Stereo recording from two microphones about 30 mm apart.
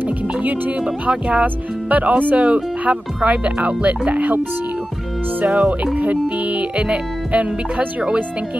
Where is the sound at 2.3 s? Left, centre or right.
Right.